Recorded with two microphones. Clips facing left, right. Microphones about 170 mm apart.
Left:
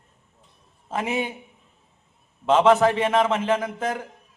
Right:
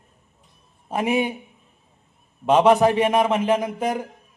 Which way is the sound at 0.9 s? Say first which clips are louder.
Right 4 dB; 15° right (ahead or behind).